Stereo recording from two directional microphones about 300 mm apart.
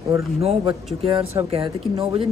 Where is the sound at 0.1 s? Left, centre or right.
Centre.